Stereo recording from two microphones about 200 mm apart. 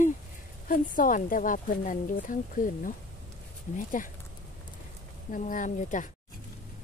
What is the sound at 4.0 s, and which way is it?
Speech, 40° left (ahead or behind).